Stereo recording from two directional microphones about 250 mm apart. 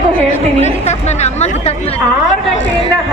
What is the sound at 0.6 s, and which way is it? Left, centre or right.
A woman's voice, left.